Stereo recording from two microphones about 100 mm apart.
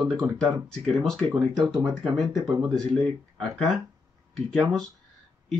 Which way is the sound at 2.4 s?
35° right (ahead or behind).